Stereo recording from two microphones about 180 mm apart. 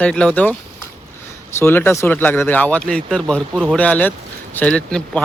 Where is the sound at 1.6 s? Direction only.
10° left (ahead or behind).